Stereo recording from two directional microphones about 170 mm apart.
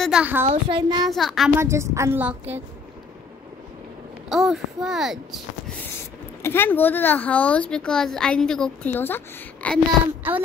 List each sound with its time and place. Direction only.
0.0 s a woman's voice: 5° right (ahead or behind)
0.5 s a child's voice: 30° right (ahead or behind)
1.0 s a child's voice: centre (ahead or behind)
1.6 s a woman's voice: 15° right (ahead or behind)
4.3 s a child's voice: centre (ahead or behind)
6.4 s speech: 10° left (ahead or behind)
10.3 s a woman's voice: 10° right (ahead or behind)